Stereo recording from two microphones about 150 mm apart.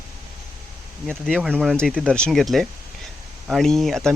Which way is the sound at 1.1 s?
5° left (ahead or behind).